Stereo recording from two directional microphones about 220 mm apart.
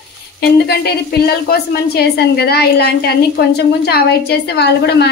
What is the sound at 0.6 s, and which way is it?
A woman's voice, 45° left (ahead or behind).